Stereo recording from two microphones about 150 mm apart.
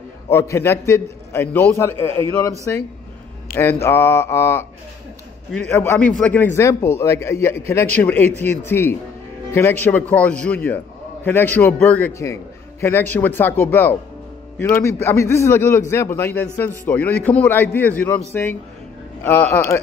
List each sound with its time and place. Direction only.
0.3 s a man's voice: 15° left (ahead or behind)
19.2 s a man's voice: 15° left (ahead or behind)